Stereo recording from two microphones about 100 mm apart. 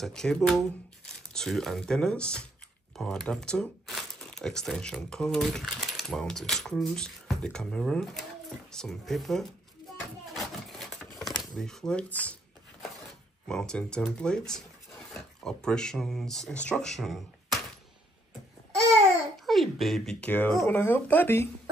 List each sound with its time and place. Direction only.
0.0 s speech: 5° left (ahead or behind)
10.2 s a sound: centre (ahead or behind)
11.5 s speech: 5° left (ahead or behind)
13.5 s speech: 5° left (ahead or behind)
19.4 s a sound: centre (ahead or behind)
20.2 s speech: 15° left (ahead or behind)